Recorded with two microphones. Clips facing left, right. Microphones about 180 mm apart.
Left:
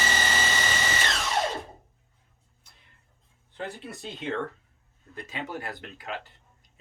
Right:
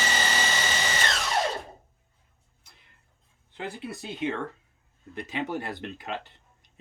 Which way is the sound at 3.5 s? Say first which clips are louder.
Even; 15° right (ahead or behind).